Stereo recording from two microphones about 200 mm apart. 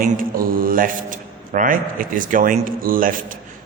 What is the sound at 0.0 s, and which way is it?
A man's voice, 45° right (ahead or behind).